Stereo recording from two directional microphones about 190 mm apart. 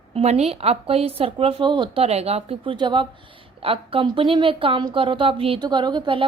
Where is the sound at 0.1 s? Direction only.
35° right (ahead or behind).